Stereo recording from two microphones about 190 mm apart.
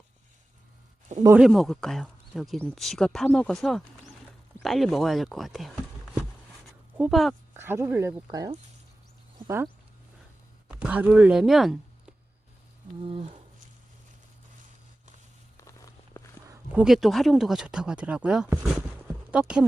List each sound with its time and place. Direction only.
1.4 s speech: centre (ahead or behind)
6.9 s speech: 5° right (ahead or behind)
7.5 s speech: 10° right (ahead or behind)
10.7 s speech: 5° right (ahead or behind)
13.0 s speech: 30° right (ahead or behind)
15.5 s walk: 15° left (ahead or behind)
16.5 s speech: 5° right (ahead or behind)